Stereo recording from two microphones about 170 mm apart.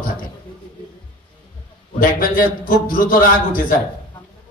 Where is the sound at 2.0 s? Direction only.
55° left (ahead or behind).